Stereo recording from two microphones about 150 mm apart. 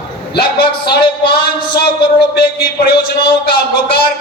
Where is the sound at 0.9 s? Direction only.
90° left.